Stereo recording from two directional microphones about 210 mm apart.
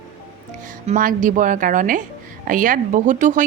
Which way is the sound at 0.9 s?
40° right (ahead or behind).